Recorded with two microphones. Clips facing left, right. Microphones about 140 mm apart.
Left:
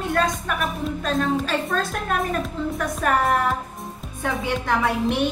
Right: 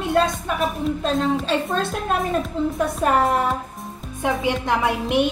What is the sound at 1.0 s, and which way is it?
A woman's voice, 25° right (ahead or behind).